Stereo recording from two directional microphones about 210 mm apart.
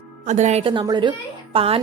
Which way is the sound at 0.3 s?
35° right (ahead or behind).